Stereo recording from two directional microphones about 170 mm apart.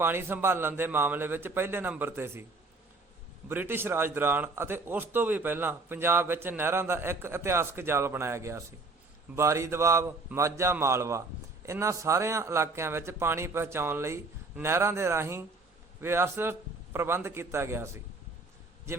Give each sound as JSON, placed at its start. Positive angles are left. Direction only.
{"t": 0.0, "sound": "a man's voice", "side_deg": -15}
{"t": 3.5, "sound": "a man's voice", "side_deg": -10}